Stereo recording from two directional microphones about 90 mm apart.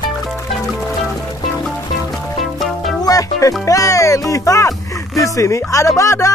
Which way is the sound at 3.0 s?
40° left (ahead or behind).